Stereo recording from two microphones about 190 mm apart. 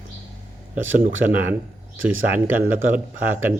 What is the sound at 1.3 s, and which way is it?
Speech, 10° right (ahead or behind).